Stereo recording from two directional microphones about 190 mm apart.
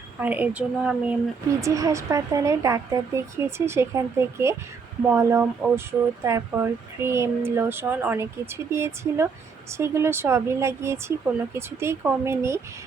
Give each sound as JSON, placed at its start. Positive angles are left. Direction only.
{"t": 0.2, "sound": "speech", "side_deg": -10}
{"t": 1.5, "sound": "speech", "side_deg": -15}